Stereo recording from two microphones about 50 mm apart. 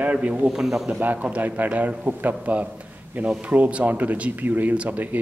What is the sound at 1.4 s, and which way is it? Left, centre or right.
A man's voice, right.